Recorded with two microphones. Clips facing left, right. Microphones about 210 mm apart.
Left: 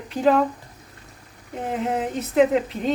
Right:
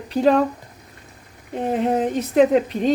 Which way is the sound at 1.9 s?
35° right (ahead or behind).